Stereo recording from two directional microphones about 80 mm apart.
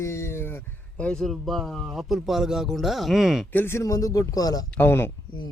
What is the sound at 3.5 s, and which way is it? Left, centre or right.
Speech, left.